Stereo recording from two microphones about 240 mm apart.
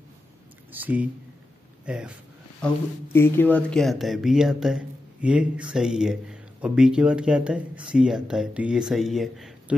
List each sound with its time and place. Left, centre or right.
0.7 s speech: centre
2.6 s speech: centre